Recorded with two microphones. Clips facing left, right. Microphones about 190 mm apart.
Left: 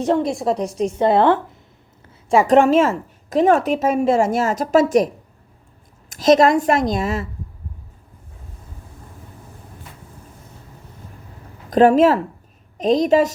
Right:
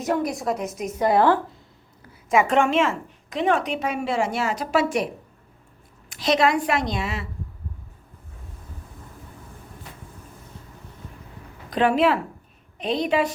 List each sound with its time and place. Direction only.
0.0 s a woman's voice: 30° left (ahead or behind)
2.3 s a woman's voice: 35° left (ahead or behind)
11.7 s a woman's voice: 45° left (ahead or behind)